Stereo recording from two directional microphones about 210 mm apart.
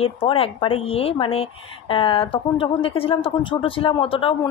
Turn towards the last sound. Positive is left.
turn(degrees=25)  # may be behind; listen again after turning